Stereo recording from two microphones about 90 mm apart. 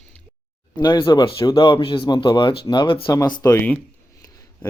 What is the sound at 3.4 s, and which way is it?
Speech, 20° left (ahead or behind).